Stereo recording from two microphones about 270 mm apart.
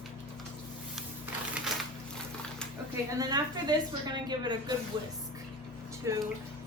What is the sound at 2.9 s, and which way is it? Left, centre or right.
A woman's voice, centre.